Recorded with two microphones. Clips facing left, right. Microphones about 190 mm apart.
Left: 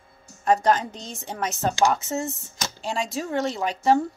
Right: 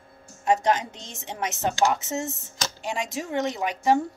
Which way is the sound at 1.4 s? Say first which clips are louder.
Left 1 dB; 20° right (ahead or behind).